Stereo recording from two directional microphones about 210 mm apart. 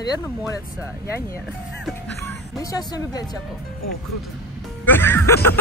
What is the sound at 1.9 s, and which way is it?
Speech, 5° left (ahead or behind).